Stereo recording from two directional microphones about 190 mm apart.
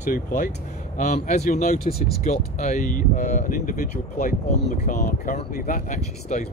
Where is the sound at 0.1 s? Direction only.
45° left (ahead or behind).